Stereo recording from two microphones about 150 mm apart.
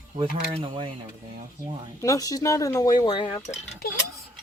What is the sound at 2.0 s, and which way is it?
Speech, 25° left (ahead or behind).